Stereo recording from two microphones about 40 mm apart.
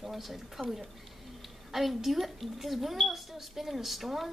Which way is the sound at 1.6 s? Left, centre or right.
Centre.